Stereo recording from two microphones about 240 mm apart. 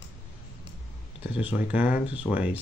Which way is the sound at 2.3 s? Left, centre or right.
Centre.